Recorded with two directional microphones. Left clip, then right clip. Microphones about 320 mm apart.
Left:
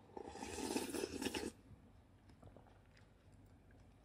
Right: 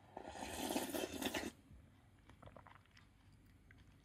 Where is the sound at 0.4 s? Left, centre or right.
Centre.